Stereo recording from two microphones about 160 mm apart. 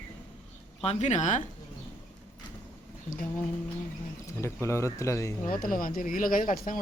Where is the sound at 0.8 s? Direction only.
45° left (ahead or behind).